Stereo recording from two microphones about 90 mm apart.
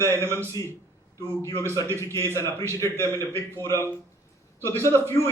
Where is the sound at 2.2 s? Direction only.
30° left (ahead or behind).